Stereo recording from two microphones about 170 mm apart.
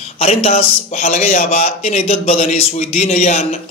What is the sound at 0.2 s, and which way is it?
A man's voice, 35° left (ahead or behind).